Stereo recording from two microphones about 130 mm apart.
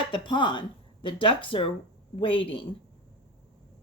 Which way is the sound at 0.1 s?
40° left (ahead or behind).